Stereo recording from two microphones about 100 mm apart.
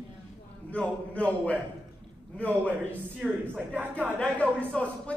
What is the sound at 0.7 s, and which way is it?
Speech, 15° left (ahead or behind).